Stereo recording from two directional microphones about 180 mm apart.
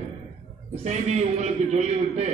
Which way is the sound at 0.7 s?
35° right (ahead or behind).